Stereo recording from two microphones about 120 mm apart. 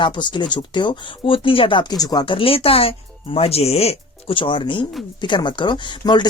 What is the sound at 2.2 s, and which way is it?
Speech, 50° left (ahead or behind).